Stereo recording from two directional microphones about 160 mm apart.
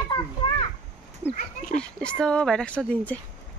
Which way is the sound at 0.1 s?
30° left (ahead or behind).